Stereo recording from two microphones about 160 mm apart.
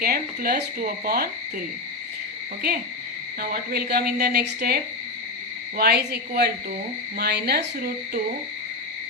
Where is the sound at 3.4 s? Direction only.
70° right (ahead or behind); by 7.6 s 90° right.